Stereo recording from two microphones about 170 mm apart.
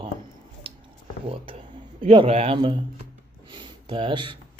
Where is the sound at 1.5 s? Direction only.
30° right (ahead or behind).